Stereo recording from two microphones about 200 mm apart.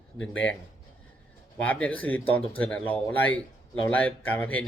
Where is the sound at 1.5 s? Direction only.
5° left (ahead or behind).